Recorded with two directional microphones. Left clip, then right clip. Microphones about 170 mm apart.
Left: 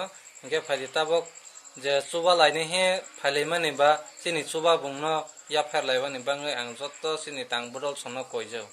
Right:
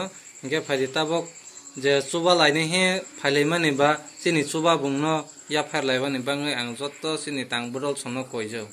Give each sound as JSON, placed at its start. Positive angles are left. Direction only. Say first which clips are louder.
{"t": 0.0, "sound": "speech", "louder": "right 3 dB", "side_deg": 25}